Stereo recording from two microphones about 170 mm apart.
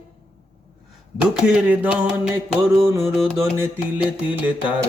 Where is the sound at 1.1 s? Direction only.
5° right (ahead or behind).